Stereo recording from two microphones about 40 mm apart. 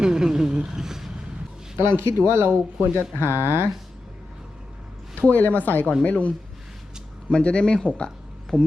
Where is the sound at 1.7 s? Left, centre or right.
Right.